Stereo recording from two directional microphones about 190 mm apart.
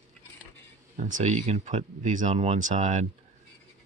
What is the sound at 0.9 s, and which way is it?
Speech, 40° right (ahead or behind).